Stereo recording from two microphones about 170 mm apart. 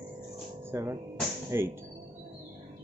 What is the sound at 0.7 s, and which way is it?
Speech, 15° right (ahead or behind).